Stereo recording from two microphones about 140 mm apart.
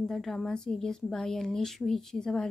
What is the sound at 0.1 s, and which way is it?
Speech, centre (ahead or behind).